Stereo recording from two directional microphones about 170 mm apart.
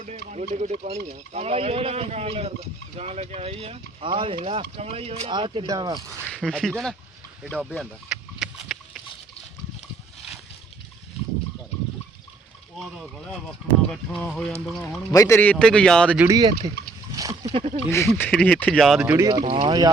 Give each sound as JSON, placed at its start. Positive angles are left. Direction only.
{"t": 0.0, "sound": "speech", "side_deg": -45}
{"t": 6.2, "sound": "speech", "side_deg": 5}
{"t": 7.6, "sound": "a sound", "side_deg": 0}
{"t": 13.5, "sound": "speech", "side_deg": 5}
{"t": 15.1, "sound": "a man's voice", "side_deg": 15}
{"t": 16.3, "sound": "speech", "side_deg": -25}
{"t": 17.2, "sound": "a sound", "side_deg": -20}
{"t": 17.5, "sound": "speech", "side_deg": -40}
{"t": 18.2, "sound": "speech", "side_deg": 5}
{"t": 19.0, "sound": "speech", "side_deg": -15}